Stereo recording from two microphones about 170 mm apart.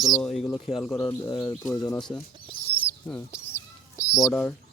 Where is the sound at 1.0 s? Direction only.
25° left (ahead or behind).